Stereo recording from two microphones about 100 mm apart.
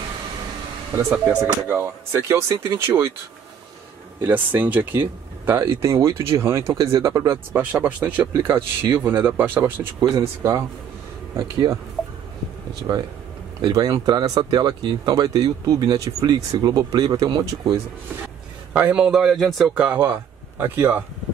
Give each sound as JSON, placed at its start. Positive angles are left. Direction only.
{"t": 1.0, "sound": "a man's voice", "side_deg": -5}
{"t": 1.4, "sound": "speech", "side_deg": -30}
{"t": 4.3, "sound": "speech", "side_deg": -20}
{"t": 7.2, "sound": "speech", "side_deg": -20}
{"t": 8.4, "sound": "speech", "side_deg": -25}
{"t": 10.1, "sound": "speech", "side_deg": -30}
{"t": 12.9, "sound": "speech", "side_deg": -50}
{"t": 18.7, "sound": "a man's voice", "side_deg": -15}
{"t": 19.7, "sound": "speech", "side_deg": -15}
{"t": 20.0, "sound": "speech", "side_deg": -25}